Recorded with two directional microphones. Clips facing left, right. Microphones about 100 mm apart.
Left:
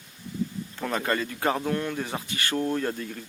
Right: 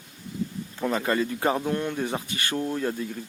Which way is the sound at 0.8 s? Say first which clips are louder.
Right 3 dB; 15° right (ahead or behind).